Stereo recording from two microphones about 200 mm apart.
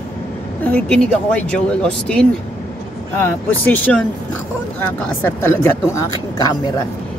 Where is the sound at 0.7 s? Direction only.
5° left (ahead or behind).